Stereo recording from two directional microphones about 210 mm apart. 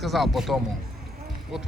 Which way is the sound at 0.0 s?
Centre (ahead or behind).